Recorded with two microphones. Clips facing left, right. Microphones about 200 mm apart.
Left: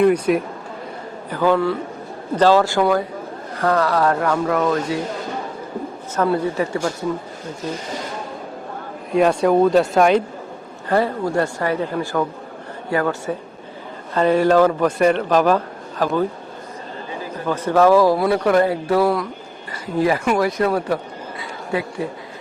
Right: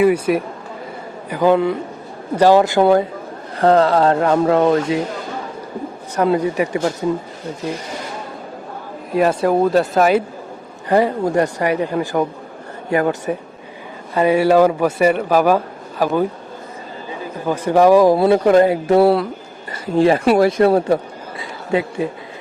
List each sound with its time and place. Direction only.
0.0 s speech: 5° right (ahead or behind)
1.3 s a man's voice: 15° right (ahead or behind)
6.1 s a man's voice: 15° right (ahead or behind)
9.1 s speech: 5° right (ahead or behind)
10.8 s a man's voice: 15° right (ahead or behind)
17.4 s speech: 15° right (ahead or behind)